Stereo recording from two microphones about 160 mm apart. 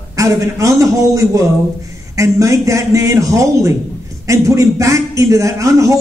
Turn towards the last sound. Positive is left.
turn(degrees=-20)  # may be behind; listen again after turning